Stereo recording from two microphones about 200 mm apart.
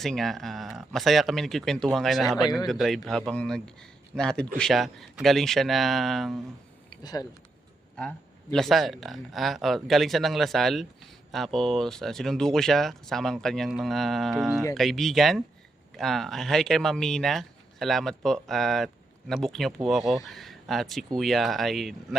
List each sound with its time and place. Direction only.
0.0 s speech: centre (ahead or behind)
7.0 s speech: 20° left (ahead or behind)
7.9 s speech: 5° left (ahead or behind)